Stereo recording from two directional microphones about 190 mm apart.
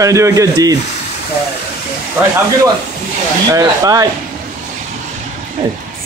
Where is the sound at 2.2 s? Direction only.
10° right (ahead or behind).